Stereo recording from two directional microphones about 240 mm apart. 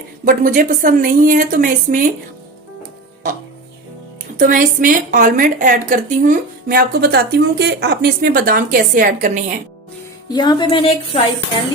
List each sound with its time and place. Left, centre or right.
0.3 s a woman's voice: right
4.4 s a woman's voice: right
10.3 s a woman's voice: centre